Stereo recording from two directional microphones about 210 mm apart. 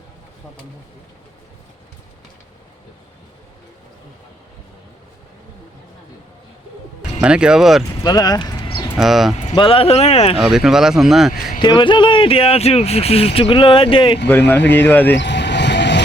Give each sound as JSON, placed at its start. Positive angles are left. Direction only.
{"t": 7.2, "sound": "speech", "side_deg": -5}
{"t": 8.0, "sound": "clip-clop", "side_deg": 20}
{"t": 9.0, "sound": "speech", "side_deg": 0}
{"t": 9.4, "sound": "speech", "side_deg": 30}
{"t": 10.3, "sound": "speech", "side_deg": 0}
{"t": 11.6, "sound": "speech", "side_deg": 20}
{"t": 14.3, "sound": "speech", "side_deg": 10}
{"t": 15.1, "sound": "vehicle", "side_deg": 55}